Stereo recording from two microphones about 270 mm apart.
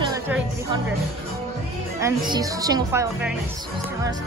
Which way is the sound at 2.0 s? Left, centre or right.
Centre.